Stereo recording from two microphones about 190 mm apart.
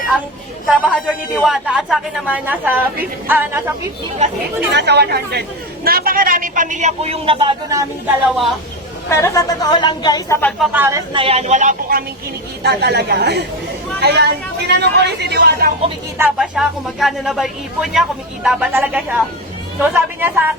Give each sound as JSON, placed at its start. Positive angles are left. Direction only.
{"t": 0.9, "sound": "a woman's voice", "side_deg": -5}
{"t": 4.7, "sound": "speech", "side_deg": -65}
{"t": 9.0, "sound": "speech", "side_deg": 15}
{"t": 10.6, "sound": "speech", "side_deg": -10}
{"t": 11.1, "sound": "speech", "side_deg": -30}
{"t": 12.6, "sound": "speech", "side_deg": -60}
{"t": 16.1, "sound": "a woman's voice", "side_deg": -5}